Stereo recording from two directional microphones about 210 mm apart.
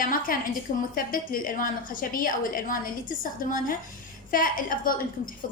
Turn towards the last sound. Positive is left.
turn(degrees=40)  # may be behind; listen again after turning